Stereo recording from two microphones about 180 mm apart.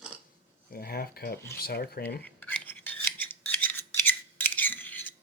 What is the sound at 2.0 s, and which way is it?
Filing, 10° left (ahead or behind).